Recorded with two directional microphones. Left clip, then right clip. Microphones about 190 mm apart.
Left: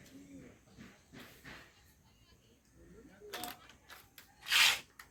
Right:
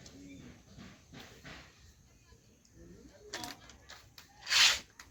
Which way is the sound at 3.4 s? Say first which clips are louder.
Right 1 dB; 30° left (ahead or behind).